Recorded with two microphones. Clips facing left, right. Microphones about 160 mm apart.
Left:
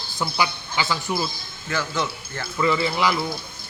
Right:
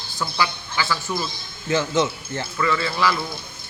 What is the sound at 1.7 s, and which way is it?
Speech, 20° right (ahead or behind).